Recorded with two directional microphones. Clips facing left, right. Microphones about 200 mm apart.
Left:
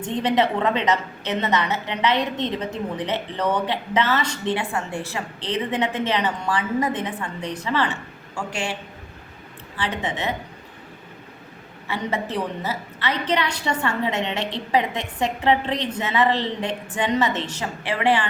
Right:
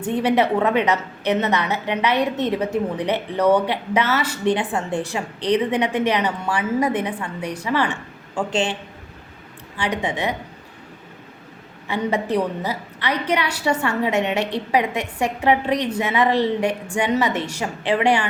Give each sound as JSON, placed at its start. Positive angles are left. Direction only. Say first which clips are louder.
{"t": 0.0, "sound": "a woman's voice", "louder": "right 2 dB", "side_deg": -10}
{"t": 4.5, "sound": "a woman's voice", "louder": "right 4 dB", "side_deg": -20}
{"t": 9.7, "sound": "a woman's voice", "louder": "right 3 dB", "side_deg": -15}
{"t": 11.9, "sound": "a woman's voice", "louder": "right 5 dB", "side_deg": -15}